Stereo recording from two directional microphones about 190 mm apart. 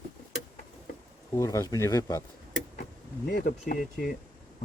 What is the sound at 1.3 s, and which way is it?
Speech, 15° left (ahead or behind).